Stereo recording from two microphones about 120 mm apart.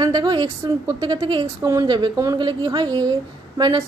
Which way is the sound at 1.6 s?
30° right (ahead or behind).